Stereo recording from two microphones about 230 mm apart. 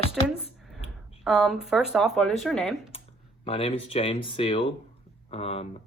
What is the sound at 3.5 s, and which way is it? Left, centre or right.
Speech, left.